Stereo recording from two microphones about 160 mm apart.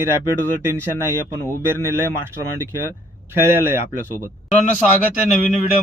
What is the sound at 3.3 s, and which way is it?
Speech, 15° right (ahead or behind).